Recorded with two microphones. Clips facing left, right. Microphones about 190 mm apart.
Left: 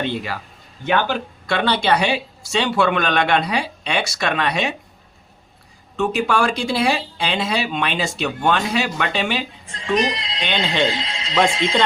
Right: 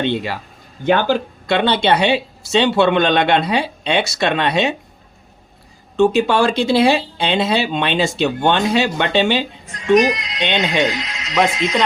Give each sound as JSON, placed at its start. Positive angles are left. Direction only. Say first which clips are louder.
{"t": 0.0, "sound": "speech", "louder": "right 4 dB", "side_deg": -25}
{"t": 6.0, "sound": "speech", "louder": "right 5 dB", "side_deg": -25}
{"t": 9.6, "sound": "speech", "louder": "right 7 dB", "side_deg": 30}